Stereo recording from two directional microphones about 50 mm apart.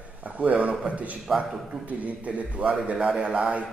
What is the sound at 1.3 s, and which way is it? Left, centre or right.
Speech, centre.